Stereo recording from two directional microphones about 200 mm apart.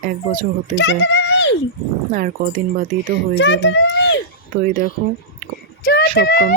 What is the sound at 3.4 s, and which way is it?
Speech, 60° left (ahead or behind).